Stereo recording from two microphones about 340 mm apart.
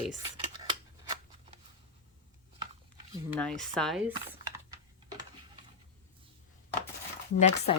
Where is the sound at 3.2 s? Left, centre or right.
Centre.